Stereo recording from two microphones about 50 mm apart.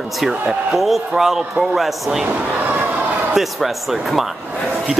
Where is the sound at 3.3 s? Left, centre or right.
Centre.